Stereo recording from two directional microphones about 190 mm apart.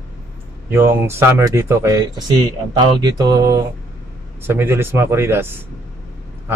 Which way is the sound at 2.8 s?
20° right (ahead or behind).